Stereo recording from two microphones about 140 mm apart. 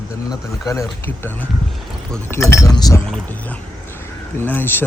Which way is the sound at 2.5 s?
25° left (ahead or behind).